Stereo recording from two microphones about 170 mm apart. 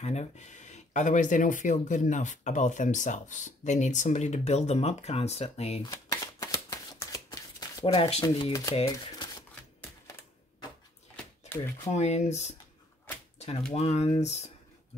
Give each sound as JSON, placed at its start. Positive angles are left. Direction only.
{"t": 0.0, "sound": "speech", "side_deg": 40}
{"t": 5.9, "sound": "shuffling cards", "side_deg": 20}
{"t": 7.8, "sound": "speech", "side_deg": 35}
{"t": 11.4, "sound": "speech", "side_deg": 15}
{"t": 11.9, "sound": "speech", "side_deg": 40}
{"t": 13.7, "sound": "speech", "side_deg": 40}